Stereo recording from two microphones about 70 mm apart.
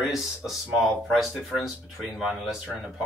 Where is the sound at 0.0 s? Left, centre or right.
Centre.